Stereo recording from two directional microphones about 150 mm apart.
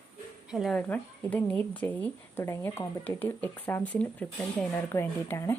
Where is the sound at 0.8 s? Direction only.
10° left (ahead or behind).